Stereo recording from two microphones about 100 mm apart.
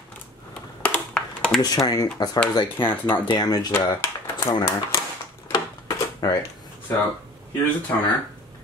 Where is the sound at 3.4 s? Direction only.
40° left (ahead or behind).